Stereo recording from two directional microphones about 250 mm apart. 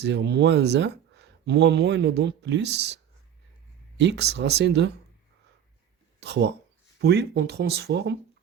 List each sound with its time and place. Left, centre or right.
0.0 s speech: right
6.1 s speech: right